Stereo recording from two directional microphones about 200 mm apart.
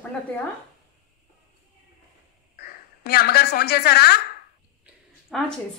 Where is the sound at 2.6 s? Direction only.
50° left (ahead or behind).